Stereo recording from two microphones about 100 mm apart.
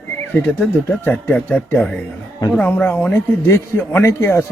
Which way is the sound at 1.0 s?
15° left (ahead or behind).